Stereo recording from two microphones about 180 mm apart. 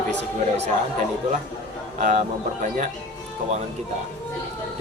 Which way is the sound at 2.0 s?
40° right (ahead or behind).